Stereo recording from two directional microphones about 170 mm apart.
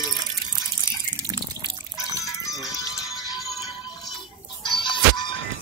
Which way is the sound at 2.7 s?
20° left (ahead or behind).